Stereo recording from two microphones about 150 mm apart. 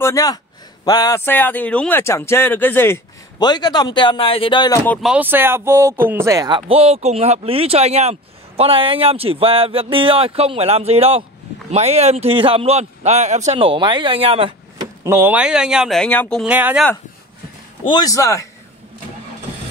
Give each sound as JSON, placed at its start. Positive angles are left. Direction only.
{"t": 0.0, "sound": "a man's voice", "side_deg": 25}
{"t": 3.3, "sound": "speech", "side_deg": 25}
{"t": 5.0, "sound": "speech", "side_deg": -10}
{"t": 6.7, "sound": "speech", "side_deg": -40}
{"t": 15.0, "sound": "speech", "side_deg": -15}
{"t": 16.4, "sound": "speech", "side_deg": -10}
{"t": 17.8, "sound": "speech", "side_deg": 25}